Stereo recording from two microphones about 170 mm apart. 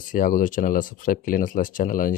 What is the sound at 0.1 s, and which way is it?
Speech, 55° left (ahead or behind).